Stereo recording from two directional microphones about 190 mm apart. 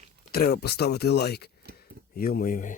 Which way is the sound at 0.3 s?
55° left (ahead or behind).